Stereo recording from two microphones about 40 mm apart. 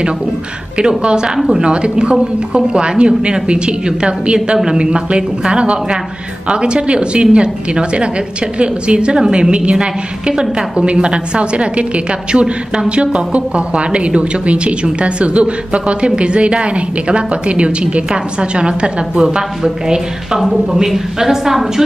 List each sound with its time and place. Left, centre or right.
0.7 s a woman's voice: right
20.3 s a woman's voice: centre